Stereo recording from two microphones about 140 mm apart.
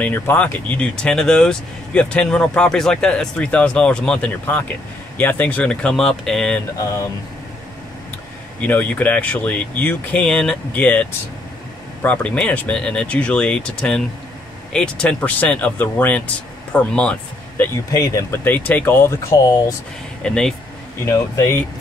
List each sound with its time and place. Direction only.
0.0 s speech: 10° left (ahead or behind)
8.5 s speech: 10° left (ahead or behind)
17.9 s speech: 20° left (ahead or behind)
20.2 s speech: 5° left (ahead or behind)
21.0 s speech: 20° left (ahead or behind)